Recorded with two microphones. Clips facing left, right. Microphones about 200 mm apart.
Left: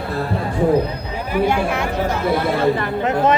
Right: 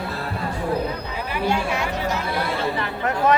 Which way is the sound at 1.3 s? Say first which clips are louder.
Left 5 dB; 55° left (ahead or behind).